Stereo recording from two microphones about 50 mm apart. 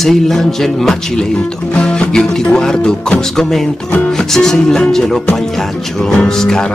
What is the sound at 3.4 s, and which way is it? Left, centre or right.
Music, centre.